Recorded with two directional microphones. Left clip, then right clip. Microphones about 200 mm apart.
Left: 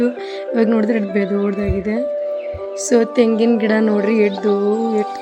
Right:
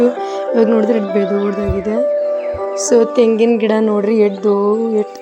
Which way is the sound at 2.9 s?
5° right (ahead or behind).